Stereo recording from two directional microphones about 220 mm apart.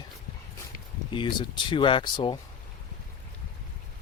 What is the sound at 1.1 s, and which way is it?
Speech, 20° left (ahead or behind).